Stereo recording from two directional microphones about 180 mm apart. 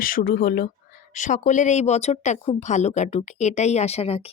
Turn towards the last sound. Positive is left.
turn(degrees=35)  # may be behind; listen again after turning